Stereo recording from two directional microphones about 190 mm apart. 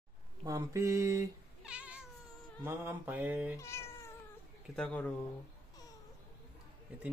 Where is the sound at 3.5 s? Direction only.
15° left (ahead or behind).